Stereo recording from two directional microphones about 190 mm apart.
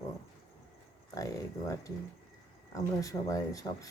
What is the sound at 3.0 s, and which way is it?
Speech, 15° left (ahead or behind).